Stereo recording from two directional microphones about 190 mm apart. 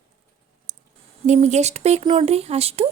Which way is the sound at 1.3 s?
35° right (ahead or behind).